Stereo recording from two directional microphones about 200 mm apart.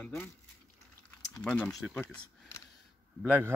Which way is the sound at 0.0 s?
10° left (ahead or behind).